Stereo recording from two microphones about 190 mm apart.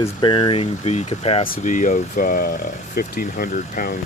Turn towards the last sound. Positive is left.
turn(degrees=50)  # may be behind; listen again after turning